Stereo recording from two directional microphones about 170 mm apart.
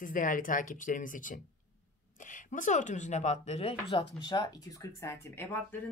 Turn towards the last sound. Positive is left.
turn(degrees=15)  # may be behind; listen again after turning